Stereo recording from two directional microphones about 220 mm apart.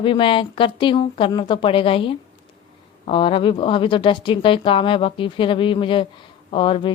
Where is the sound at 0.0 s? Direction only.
25° left (ahead or behind).